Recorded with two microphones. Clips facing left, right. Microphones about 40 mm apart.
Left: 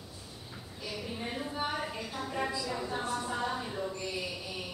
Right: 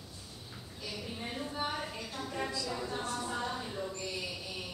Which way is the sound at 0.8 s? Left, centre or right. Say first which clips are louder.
Left 3 dB; centre.